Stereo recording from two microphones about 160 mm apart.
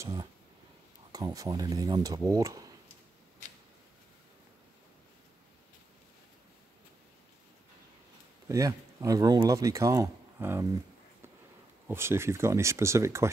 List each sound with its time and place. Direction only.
0.0 s speech: 25° right (ahead or behind)
8.5 s speech: 20° right (ahead or behind)
11.9 s speech: 15° right (ahead or behind)